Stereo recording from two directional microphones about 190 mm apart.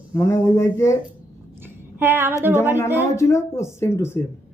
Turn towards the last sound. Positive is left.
turn(degrees=15)  # may be behind; listen again after turning